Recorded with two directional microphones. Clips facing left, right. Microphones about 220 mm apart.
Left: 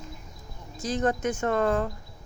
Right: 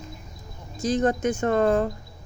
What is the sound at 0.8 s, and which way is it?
Speech, 20° right (ahead or behind).